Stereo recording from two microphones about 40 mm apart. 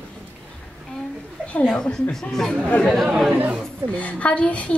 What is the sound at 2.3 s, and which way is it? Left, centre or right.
Speech, centre.